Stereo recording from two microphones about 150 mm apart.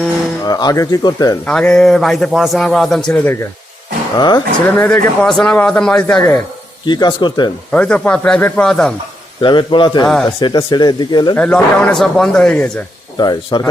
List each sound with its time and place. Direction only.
0.4 s speech: 25° left (ahead or behind)
1.5 s a man's voice: 5° left (ahead or behind)
4.2 s speech: 30° left (ahead or behind)
4.6 s a man's voice: 10° left (ahead or behind)
6.8 s speech: 30° left (ahead or behind)
7.7 s speech: 10° left (ahead or behind)
9.4 s a man's voice: 30° left (ahead or behind)
11.3 s a man's voice: 5° left (ahead or behind)
13.1 s speech: 30° left (ahead or behind)